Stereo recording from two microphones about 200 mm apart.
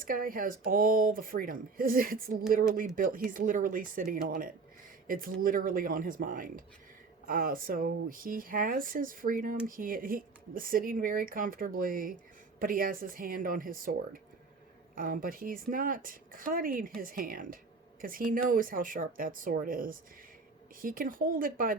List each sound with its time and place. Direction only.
0.0 s speech: 45° right (ahead or behind)